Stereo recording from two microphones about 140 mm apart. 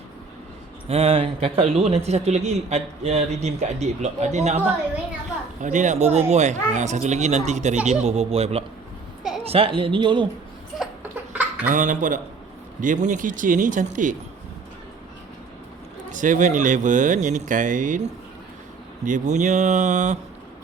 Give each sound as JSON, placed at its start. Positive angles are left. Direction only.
{"t": 0.9, "sound": "speech", "side_deg": -45}
{"t": 10.8, "sound": "a sound", "side_deg": -10}
{"t": 11.7, "sound": "speech", "side_deg": -65}
{"t": 16.1, "sound": "speech", "side_deg": -65}